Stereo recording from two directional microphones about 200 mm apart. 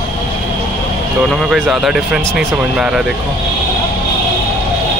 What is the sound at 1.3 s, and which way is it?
Speech, centre (ahead or behind).